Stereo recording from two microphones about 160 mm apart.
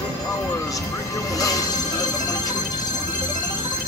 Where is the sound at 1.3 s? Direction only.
20° left (ahead or behind).